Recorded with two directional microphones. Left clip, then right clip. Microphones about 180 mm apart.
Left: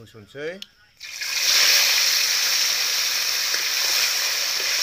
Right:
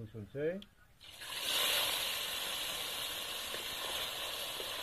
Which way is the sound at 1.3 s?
30° left (ahead or behind).